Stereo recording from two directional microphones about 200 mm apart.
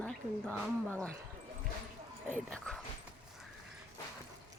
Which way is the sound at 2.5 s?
5° left (ahead or behind).